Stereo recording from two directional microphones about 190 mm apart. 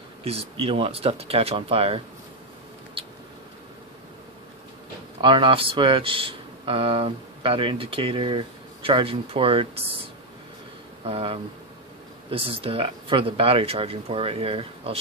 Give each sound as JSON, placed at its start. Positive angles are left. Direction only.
{"t": 0.2, "sound": "speech", "side_deg": -30}
{"t": 5.2, "sound": "speech", "side_deg": -25}
{"t": 11.1, "sound": "speech", "side_deg": -30}